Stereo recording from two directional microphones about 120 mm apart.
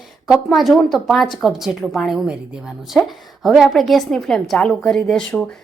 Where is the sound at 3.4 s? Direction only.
Centre (ahead or behind).